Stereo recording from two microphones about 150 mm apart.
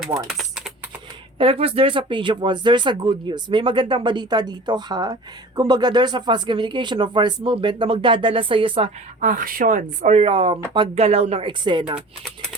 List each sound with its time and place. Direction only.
0.3 s typing: centre (ahead or behind)
1.4 s speech: 40° right (ahead or behind)
9.2 s speech: 65° right (ahead or behind); by 11.5 s 45° right (ahead or behind)
11.6 s speech: 30° right (ahead or behind)